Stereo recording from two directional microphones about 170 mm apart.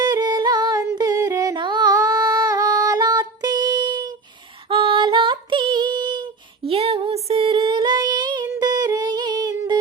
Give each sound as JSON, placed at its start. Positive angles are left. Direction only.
{"t": 0.0, "sound": "singing", "side_deg": -25}
{"t": 4.7, "sound": "female singing", "side_deg": -30}
{"t": 6.7, "sound": "child singing", "side_deg": -35}
{"t": 8.4, "sound": "a sound", "side_deg": -25}